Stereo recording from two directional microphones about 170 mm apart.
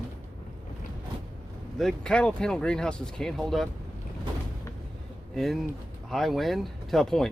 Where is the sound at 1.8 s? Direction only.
5° left (ahead or behind).